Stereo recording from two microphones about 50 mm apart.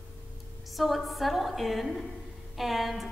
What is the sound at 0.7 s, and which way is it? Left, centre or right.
A woman's voice, centre.